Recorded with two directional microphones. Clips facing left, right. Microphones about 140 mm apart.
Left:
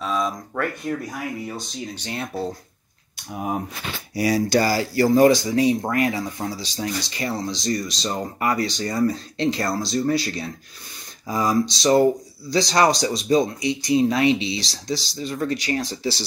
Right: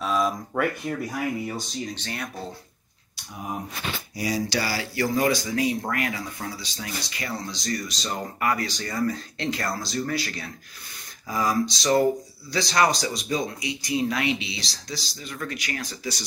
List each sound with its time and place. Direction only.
0.0 s a sound: 5° right (ahead or behind)
2.0 s speech: 20° left (ahead or behind)
4.1 s speech: 65° left (ahead or behind)
4.6 s speech: 40° left (ahead or behind)